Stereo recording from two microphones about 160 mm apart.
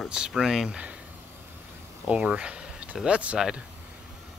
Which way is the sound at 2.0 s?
5° right (ahead or behind).